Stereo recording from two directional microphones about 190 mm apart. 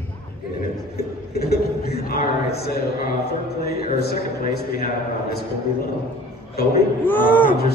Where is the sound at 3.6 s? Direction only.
55° left (ahead or behind).